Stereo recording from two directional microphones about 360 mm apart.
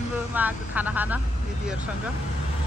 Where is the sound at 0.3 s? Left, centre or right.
Centre.